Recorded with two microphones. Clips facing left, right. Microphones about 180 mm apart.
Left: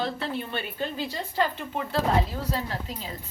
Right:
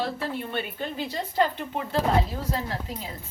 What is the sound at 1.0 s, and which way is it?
Speech, 15° right (ahead or behind).